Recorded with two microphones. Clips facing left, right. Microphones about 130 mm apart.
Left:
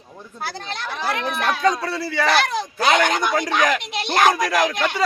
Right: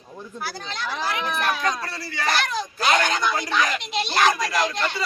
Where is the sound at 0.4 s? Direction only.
60° left (ahead or behind).